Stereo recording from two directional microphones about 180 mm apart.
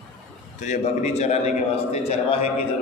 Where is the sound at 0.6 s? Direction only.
40° left (ahead or behind).